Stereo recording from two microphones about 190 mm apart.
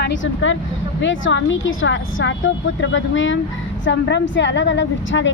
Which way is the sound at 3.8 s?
70° left (ahead or behind).